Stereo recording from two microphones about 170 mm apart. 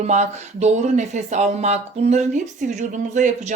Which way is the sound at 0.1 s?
45° right (ahead or behind).